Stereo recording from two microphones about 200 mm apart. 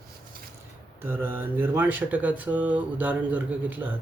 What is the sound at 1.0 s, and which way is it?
Speech, 10° right (ahead or behind).